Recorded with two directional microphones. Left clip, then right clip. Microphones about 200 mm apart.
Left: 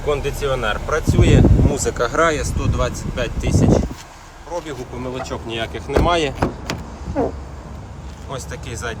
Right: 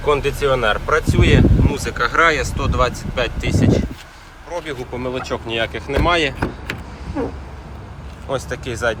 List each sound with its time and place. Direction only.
0.0 s speech: 10° left (ahead or behind)
1.7 s speech: 30° left (ahead or behind); by 6.5 s 15° left (ahead or behind)
8.3 s speech: centre (ahead or behind)